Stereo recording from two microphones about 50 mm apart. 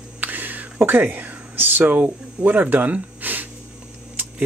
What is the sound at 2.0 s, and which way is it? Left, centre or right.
Speech, right.